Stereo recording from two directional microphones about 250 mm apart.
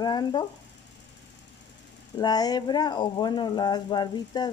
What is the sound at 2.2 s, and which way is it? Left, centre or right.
Speech, centre.